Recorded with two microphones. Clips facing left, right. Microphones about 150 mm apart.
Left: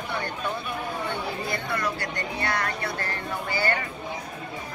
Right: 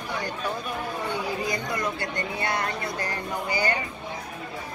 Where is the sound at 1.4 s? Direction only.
15° right (ahead or behind).